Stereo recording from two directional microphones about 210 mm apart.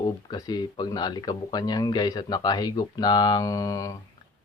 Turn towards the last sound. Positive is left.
turn(degrees=15)  # may be behind; listen again after turning